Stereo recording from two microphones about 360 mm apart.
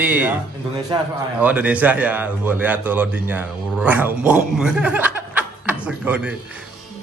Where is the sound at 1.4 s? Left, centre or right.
Centre.